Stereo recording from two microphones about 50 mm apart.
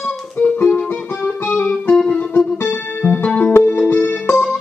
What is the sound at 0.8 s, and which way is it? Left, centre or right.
Music, left.